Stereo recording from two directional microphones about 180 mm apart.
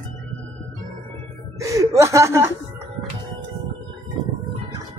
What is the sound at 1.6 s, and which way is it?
Speech, 20° right (ahead or behind).